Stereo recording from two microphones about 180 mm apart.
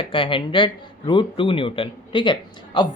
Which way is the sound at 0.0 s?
30° left (ahead or behind).